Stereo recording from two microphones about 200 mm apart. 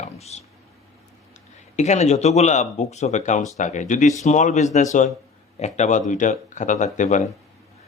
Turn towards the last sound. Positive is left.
turn(degrees=40)  # may be behind; listen again after turning